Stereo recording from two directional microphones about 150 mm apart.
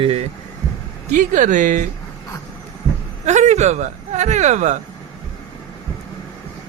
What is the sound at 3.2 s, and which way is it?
Speech, 50° right (ahead or behind).